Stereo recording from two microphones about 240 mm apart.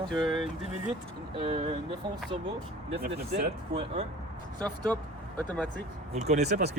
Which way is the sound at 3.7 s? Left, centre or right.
Right.